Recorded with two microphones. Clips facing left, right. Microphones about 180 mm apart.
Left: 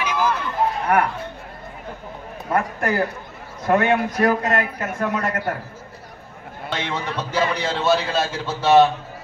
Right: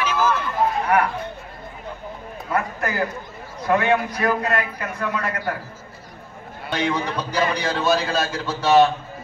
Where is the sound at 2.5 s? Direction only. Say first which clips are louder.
Left 3 dB; 50° left (ahead or behind).